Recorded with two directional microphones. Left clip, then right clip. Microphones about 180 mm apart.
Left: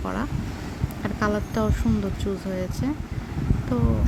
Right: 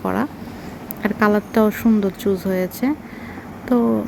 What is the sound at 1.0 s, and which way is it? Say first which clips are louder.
Speech: right 8 dB; 20° right (ahead or behind).